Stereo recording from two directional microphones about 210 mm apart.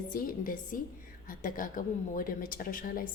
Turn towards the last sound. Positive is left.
turn(degrees=40)  # may be behind; listen again after turning